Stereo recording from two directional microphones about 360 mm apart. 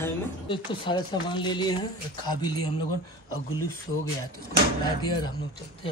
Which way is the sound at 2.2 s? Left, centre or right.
Left.